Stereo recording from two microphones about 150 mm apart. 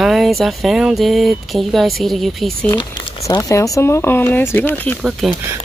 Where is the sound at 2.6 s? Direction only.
30° left (ahead or behind).